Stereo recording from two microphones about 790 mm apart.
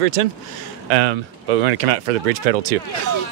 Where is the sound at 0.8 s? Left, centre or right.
Right.